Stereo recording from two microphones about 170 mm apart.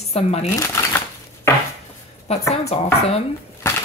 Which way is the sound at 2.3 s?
40° left (ahead or behind).